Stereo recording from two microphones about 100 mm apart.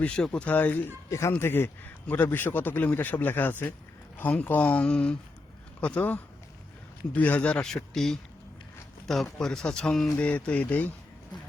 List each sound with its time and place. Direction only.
0.0 s a man's voice: 10° left (ahead or behind)